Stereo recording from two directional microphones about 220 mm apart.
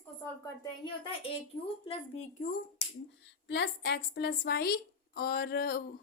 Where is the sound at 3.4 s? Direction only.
55° left (ahead or behind).